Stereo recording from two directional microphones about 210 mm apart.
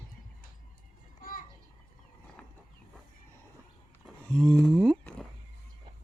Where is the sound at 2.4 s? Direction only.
5° left (ahead or behind).